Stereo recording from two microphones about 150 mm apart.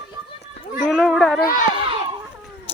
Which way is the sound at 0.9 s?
Centre (ahead or behind).